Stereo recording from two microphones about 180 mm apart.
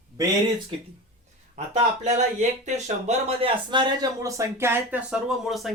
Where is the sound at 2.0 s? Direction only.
40° right (ahead or behind).